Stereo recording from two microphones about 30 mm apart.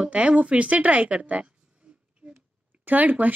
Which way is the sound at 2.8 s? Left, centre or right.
Right.